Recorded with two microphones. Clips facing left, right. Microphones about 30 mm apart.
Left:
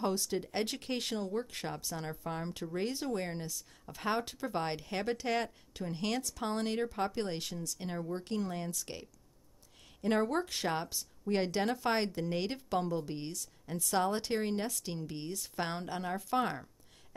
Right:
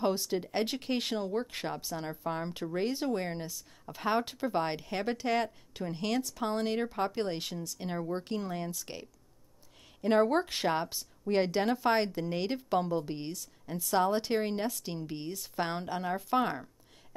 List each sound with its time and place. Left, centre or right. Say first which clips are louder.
0.0 s speech: right 3 dB; centre
4.2 s speech: right 4 dB; centre
5.9 s speech: right 3 dB; centre
6.8 s speech: right 2 dB; centre
10.2 s speech: right 5 dB; right
11.0 s speech: right 4 dB; centre